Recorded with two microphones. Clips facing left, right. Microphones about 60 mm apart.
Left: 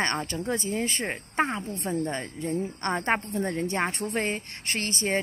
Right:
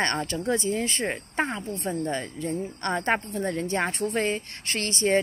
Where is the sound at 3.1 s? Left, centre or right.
Centre.